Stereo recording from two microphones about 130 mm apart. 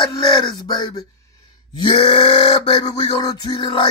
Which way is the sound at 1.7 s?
40° left (ahead or behind).